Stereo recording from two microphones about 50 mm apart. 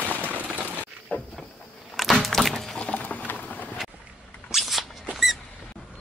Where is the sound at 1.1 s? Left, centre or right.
Left.